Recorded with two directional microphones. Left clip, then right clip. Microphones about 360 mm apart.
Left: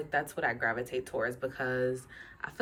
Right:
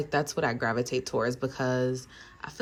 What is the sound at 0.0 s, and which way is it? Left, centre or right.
A woman's voice, centre.